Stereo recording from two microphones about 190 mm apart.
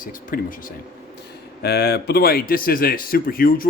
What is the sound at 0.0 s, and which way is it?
Speech, 45° left (ahead or behind).